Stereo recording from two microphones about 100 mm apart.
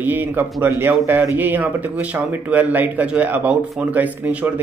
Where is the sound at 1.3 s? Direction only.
15° right (ahead or behind).